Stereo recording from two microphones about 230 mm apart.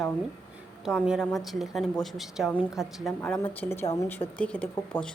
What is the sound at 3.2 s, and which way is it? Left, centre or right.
Speech, centre.